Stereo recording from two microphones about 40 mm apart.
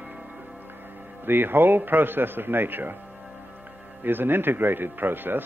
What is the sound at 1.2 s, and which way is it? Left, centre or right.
Speech, right.